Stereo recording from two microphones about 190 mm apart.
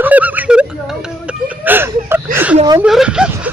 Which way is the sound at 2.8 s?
5° right (ahead or behind).